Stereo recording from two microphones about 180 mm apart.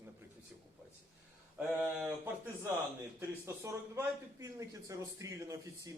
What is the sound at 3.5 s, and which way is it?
Speech, 15° right (ahead or behind).